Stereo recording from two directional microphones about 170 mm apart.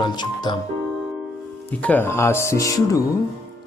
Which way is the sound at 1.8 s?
10° left (ahead or behind).